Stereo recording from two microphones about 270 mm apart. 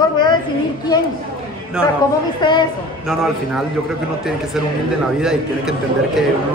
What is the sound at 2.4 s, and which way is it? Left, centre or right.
Speech, centre.